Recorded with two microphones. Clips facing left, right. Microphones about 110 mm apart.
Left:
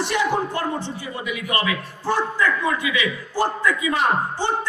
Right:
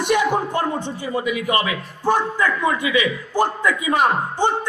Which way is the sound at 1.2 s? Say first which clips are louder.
Right 4 dB; 35° right (ahead or behind).